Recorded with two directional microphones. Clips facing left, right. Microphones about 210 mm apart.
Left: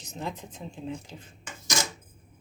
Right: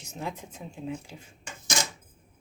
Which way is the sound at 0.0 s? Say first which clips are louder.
Even; 10° right (ahead or behind).